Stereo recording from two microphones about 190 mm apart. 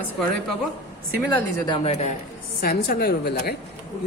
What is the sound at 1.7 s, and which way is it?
Speech, 35° left (ahead or behind).